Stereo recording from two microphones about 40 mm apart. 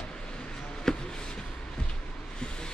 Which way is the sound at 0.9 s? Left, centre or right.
Centre.